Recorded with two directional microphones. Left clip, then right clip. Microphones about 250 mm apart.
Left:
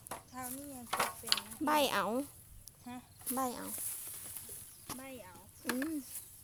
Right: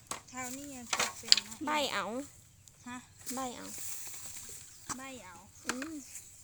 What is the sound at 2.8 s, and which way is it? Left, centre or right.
Speech, right.